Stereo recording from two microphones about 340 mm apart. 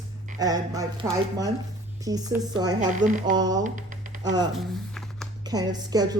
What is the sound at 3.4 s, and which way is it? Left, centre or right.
Speech, centre.